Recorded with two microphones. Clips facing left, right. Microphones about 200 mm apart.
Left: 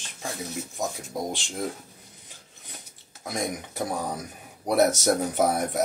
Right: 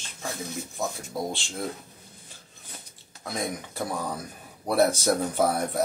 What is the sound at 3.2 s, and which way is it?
Speech, 15° left (ahead or behind).